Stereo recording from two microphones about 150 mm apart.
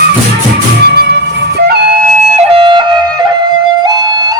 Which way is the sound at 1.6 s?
90° right.